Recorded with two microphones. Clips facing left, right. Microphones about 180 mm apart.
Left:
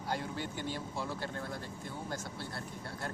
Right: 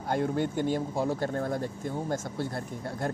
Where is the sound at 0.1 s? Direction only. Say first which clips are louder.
Right 10 dB; 50° right (ahead or behind).